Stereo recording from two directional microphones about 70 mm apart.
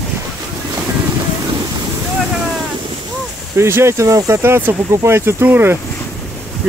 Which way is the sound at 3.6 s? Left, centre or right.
Right.